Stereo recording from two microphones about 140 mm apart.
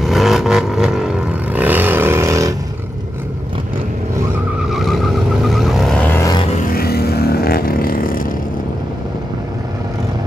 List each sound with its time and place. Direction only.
0.0 s vehicle: centre (ahead or behind)
1.5 s a sound: 10° right (ahead or behind)
4.6 s vehicle: centre (ahead or behind)
6.7 s vehicle: 90° left